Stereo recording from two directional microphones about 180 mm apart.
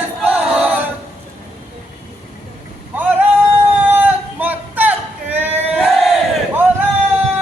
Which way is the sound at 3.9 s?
10° right (ahead or behind).